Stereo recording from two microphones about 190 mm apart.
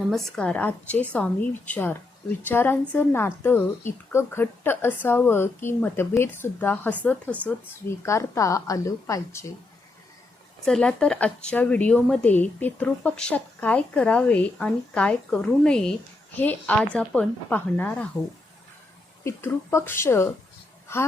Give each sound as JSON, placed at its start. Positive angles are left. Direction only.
{"t": 0.1, "sound": "a woman's voice", "side_deg": 5}
{"t": 10.7, "sound": "a woman's voice", "side_deg": 5}
{"t": 19.2, "sound": "a woman's voice", "side_deg": 15}